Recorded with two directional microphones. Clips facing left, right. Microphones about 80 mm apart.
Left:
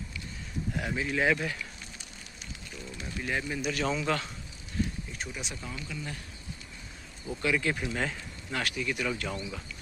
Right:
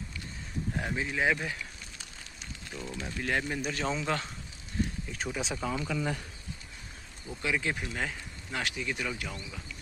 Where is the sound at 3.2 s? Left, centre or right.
Right.